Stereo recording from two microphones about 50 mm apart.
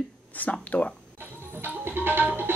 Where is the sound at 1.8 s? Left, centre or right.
Right.